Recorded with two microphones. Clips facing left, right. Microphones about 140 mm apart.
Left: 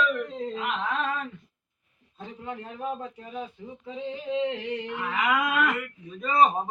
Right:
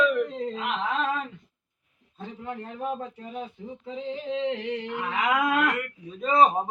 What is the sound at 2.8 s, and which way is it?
Speech, 10° right (ahead or behind).